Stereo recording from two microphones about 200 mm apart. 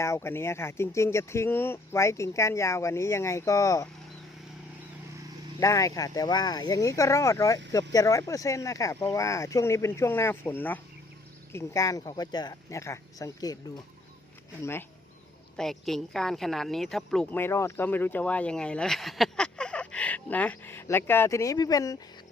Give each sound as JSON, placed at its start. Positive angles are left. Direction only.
{"t": 0.0, "sound": "a woman's voice", "side_deg": 15}
{"t": 5.5, "sound": "a woman's voice", "side_deg": 15}
{"t": 14.6, "sound": "a woman's voice", "side_deg": 10}